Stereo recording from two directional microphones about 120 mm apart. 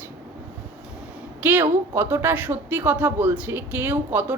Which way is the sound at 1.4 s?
15° right (ahead or behind).